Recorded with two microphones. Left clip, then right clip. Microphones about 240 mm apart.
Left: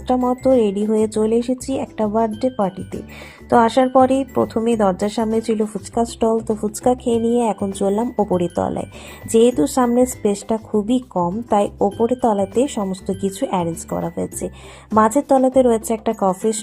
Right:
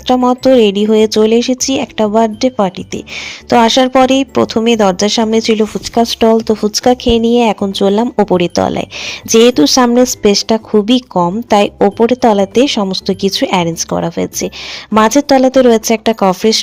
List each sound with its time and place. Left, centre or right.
0.1 s speech: right